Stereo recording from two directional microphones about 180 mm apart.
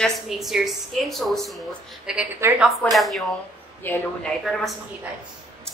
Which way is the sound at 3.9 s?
10° left (ahead or behind).